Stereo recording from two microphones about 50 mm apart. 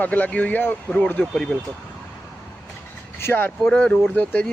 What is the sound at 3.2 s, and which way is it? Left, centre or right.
Speech, left.